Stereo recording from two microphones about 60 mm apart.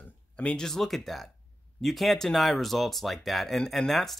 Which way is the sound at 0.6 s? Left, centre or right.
Centre.